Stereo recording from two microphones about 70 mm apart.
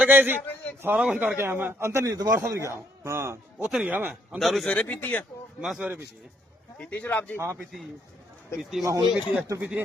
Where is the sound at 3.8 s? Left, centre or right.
Right.